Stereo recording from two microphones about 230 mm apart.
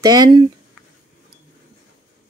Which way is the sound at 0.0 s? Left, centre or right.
Centre.